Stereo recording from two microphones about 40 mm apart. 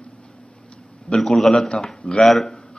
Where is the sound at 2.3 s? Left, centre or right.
Centre.